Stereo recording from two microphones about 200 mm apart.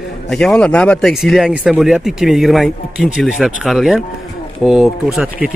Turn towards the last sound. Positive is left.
turn(degrees=-5)  # may be behind; listen again after turning